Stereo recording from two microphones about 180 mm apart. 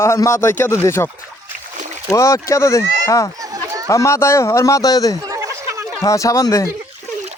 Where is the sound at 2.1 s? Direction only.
15° left (ahead or behind).